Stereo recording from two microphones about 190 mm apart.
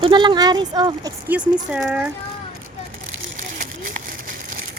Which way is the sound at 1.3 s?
10° right (ahead or behind).